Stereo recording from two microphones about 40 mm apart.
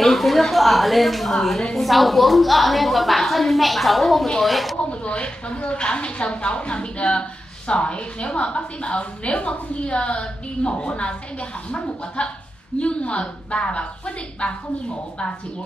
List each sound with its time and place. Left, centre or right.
0.0 s a woman's voice: centre
5.0 s a woman's voice: left
12.2 s a woman's voice: left